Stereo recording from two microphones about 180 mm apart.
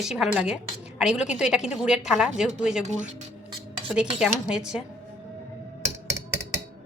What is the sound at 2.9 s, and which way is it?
Speech, 40° right (ahead or behind).